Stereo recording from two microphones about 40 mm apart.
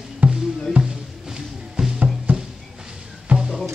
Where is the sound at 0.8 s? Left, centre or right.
Right.